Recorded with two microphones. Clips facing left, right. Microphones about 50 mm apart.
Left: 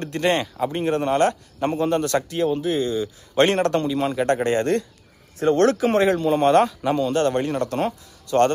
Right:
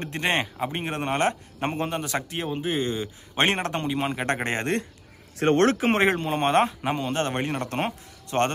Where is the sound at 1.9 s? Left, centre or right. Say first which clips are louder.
Left 8 dB; centre.